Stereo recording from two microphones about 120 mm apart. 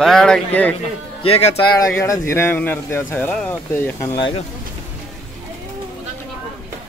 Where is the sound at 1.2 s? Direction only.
55° left (ahead or behind).